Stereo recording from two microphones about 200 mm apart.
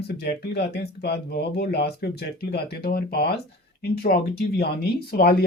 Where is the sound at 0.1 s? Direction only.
55° left (ahead or behind).